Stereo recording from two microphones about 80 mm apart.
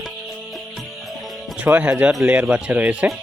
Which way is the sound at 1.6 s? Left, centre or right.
Centre.